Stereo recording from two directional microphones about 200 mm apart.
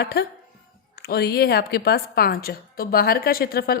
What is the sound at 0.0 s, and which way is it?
A woman's voice, 55° left (ahead or behind).